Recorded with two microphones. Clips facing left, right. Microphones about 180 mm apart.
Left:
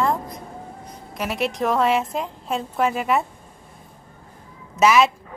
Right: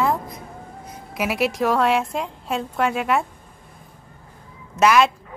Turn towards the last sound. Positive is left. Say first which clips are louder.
# even
turn(degrees=0)  # may be behind; listen again after turning